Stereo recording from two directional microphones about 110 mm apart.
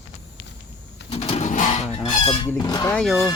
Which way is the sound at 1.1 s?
70° left (ahead or behind).